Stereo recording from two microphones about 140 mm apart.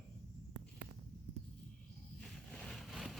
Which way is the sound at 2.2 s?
5° left (ahead or behind).